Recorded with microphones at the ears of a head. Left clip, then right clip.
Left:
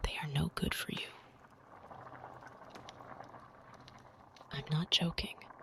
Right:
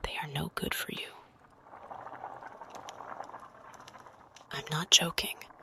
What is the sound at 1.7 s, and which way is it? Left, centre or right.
Boiling, right.